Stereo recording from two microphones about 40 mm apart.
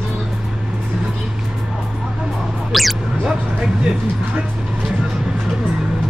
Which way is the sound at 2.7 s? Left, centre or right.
Centre.